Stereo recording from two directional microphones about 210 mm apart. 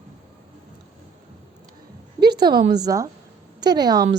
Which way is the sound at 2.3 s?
20° right (ahead or behind).